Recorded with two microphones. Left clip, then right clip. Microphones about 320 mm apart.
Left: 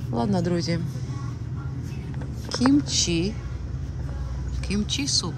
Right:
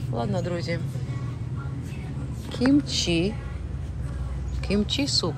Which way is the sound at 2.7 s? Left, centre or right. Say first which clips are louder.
Even; centre.